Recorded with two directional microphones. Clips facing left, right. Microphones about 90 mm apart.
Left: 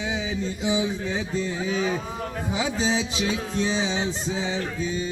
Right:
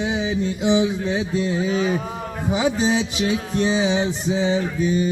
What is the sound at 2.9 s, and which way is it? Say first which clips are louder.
Music: right 4 dB; 55° right (ahead or behind).